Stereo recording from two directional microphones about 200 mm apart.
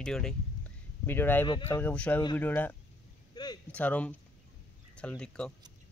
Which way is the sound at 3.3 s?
20° left (ahead or behind).